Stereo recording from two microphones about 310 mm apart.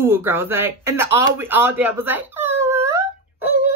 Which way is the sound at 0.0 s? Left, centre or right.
Centre.